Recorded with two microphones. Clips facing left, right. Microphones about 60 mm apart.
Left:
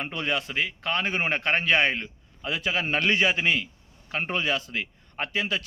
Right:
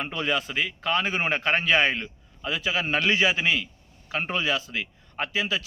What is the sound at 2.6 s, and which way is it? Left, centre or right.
Speech, left.